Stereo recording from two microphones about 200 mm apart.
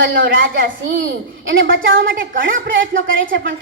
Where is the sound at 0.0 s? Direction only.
65° right (ahead or behind).